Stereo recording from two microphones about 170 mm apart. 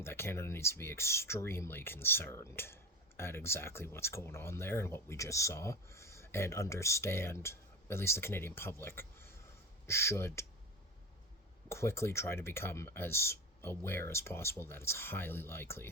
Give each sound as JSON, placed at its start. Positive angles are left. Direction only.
{"t": 0.0, "sound": "speech", "side_deg": 15}
{"t": 11.7, "sound": "speech", "side_deg": 15}